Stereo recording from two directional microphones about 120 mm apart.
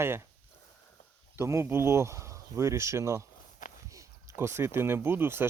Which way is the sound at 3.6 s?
90° left.